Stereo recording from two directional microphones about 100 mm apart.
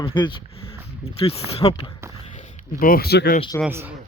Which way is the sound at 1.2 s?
80° left.